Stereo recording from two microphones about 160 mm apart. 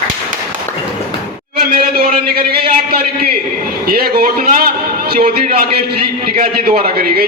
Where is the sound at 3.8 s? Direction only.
75° right (ahead or behind).